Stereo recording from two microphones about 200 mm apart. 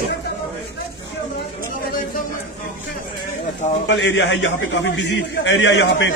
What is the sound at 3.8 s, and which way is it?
A man's voice, 65° left (ahead or behind).